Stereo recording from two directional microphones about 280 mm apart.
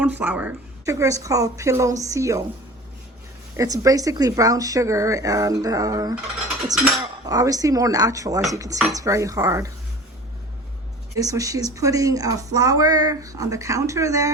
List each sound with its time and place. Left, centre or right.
0.0 s speech: centre
3.6 s speech: centre
11.1 s speech: centre